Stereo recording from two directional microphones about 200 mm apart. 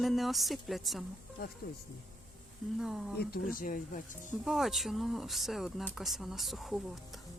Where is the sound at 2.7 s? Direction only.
Centre (ahead or behind).